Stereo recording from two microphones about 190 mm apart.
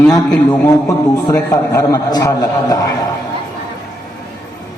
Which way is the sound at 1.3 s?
20° left (ahead or behind).